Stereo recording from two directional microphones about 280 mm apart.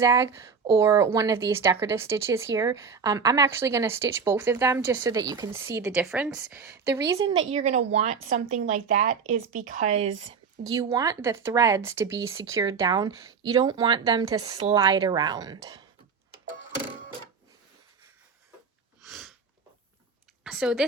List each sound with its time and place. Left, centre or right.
0.0 s a woman's voice: centre
7.5 s a woman's voice: right
19.0 s sneeze: centre
20.4 s speech: centre